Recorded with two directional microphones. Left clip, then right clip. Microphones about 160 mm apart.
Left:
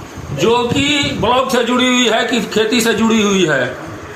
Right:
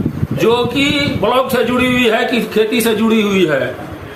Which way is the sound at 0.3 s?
10° right (ahead or behind).